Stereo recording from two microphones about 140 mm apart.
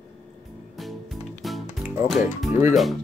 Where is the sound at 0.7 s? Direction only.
Centre (ahead or behind).